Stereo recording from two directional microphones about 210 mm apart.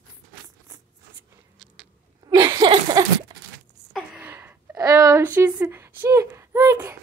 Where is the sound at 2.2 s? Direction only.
20° right (ahead or behind).